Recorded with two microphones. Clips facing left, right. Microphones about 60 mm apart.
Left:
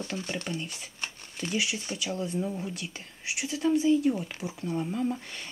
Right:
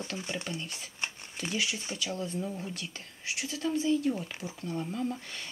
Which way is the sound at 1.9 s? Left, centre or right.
Centre.